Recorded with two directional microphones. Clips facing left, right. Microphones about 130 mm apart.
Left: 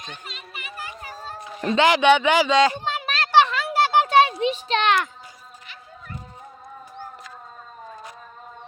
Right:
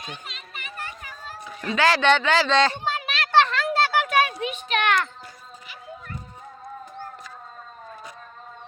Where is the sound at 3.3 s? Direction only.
10° left (ahead or behind).